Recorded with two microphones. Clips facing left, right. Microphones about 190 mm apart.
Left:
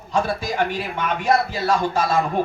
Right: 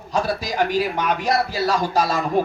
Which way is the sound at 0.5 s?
40° right (ahead or behind).